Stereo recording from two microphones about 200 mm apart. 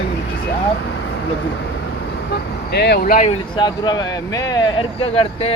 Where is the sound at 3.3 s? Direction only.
20° left (ahead or behind).